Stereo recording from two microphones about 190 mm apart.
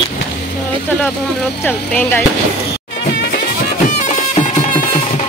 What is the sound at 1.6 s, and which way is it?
Speech, 5° left (ahead or behind).